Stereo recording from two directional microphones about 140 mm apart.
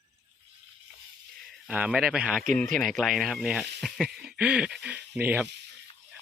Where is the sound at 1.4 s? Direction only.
5° right (ahead or behind).